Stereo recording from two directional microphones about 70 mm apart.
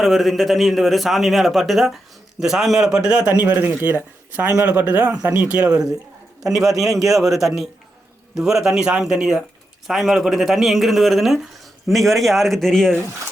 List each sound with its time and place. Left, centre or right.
0.0 s a man's voice: centre
3.3 s speech: right
6.5 s a man's voice: centre